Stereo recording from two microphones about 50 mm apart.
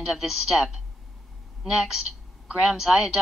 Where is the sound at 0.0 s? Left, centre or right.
Centre.